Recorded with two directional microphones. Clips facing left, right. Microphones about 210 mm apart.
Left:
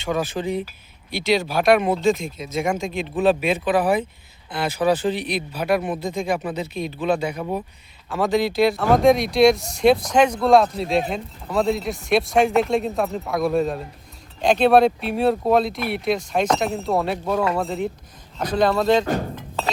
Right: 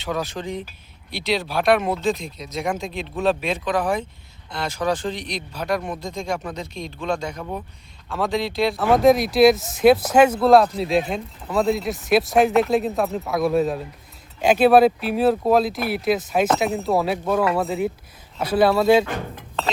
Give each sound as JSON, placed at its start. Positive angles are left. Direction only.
{"t": 0.0, "sound": "speech", "side_deg": 0}